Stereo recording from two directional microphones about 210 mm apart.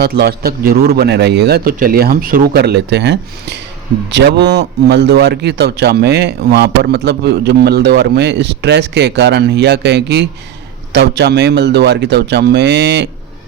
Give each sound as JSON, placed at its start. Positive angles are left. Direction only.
{"t": 0.0, "sound": "speech", "side_deg": -50}